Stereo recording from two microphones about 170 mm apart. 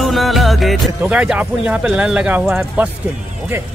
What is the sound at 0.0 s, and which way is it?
Speech, centre (ahead or behind).